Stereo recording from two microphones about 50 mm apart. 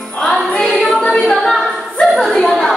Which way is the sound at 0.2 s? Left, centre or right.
Centre.